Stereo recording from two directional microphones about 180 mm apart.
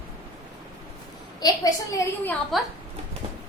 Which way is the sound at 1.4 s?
20° left (ahead or behind).